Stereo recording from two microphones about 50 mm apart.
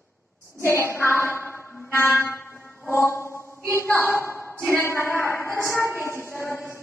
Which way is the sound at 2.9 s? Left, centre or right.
Left.